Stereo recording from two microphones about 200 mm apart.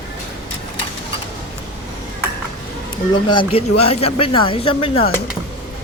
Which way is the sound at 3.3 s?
25° left (ahead or behind).